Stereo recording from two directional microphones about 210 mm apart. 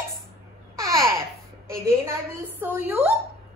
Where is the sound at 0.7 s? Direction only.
15° right (ahead or behind).